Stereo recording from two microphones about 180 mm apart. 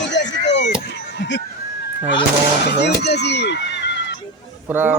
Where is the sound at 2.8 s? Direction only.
65° left (ahead or behind).